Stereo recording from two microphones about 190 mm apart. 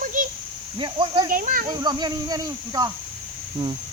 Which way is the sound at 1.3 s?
45° right (ahead or behind).